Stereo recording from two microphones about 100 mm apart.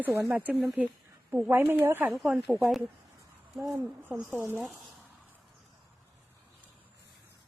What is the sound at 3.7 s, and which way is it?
Speech, 20° right (ahead or behind).